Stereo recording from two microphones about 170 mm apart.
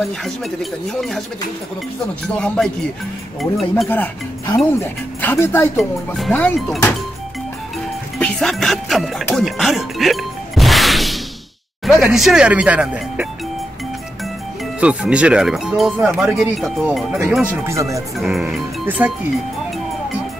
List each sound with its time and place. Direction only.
0.0 s speech: centre (ahead or behind)
2.2 s speech: 5° left (ahead or behind)
3.9 s speech: 10° left (ahead or behind)
5.8 s speech: centre (ahead or behind)
8.2 s speech: centre (ahead or behind)
14.8 s speech: 5° right (ahead or behind)
17.6 s speech: 20° right (ahead or behind)
18.1 s speech: centre (ahead or behind)